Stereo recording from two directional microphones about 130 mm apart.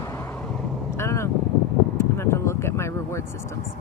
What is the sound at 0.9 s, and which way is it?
Vehicle, 20° left (ahead or behind).